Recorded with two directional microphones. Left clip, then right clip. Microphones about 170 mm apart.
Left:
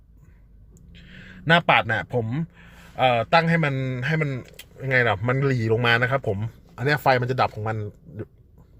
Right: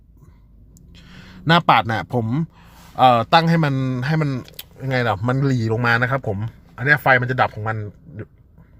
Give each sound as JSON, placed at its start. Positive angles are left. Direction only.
{"t": 1.2, "sound": "a man's voice", "side_deg": -30}
{"t": 4.8, "sound": "a man's voice", "side_deg": -10}
{"t": 5.5, "sound": "a man's voice", "side_deg": -5}